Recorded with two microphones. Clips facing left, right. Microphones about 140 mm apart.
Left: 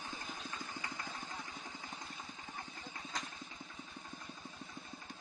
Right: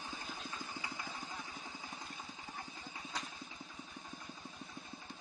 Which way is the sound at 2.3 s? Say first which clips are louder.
Even; 15° right (ahead or behind).